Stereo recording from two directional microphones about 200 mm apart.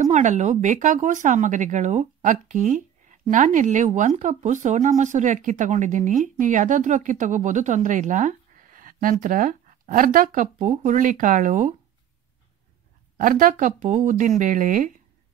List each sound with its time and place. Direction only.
0.0 s speech: 35° right (ahead or behind)
13.2 s speech: 45° right (ahead or behind)